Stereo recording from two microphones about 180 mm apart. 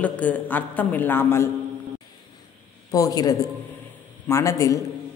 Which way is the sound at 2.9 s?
20° left (ahead or behind).